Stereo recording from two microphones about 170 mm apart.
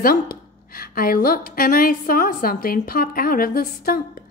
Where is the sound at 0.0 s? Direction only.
60° left (ahead or behind).